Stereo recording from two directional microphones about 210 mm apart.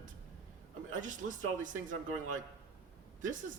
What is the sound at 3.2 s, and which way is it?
Speech, 40° right (ahead or behind).